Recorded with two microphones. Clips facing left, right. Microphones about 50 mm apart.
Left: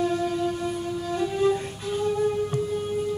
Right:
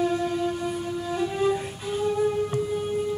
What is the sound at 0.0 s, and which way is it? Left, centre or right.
Music, centre.